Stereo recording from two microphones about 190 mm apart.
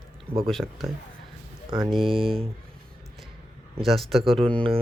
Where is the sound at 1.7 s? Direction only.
20° right (ahead or behind).